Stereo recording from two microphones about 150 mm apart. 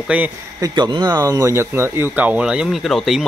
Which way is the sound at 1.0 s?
20° right (ahead or behind).